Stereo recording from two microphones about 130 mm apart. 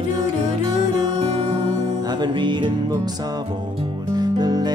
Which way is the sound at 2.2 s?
35° right (ahead or behind).